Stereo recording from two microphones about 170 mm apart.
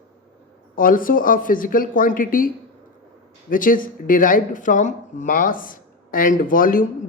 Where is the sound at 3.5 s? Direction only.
55° left (ahead or behind).